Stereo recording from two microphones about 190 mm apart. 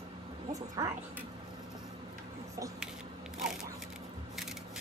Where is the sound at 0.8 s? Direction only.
15° right (ahead or behind).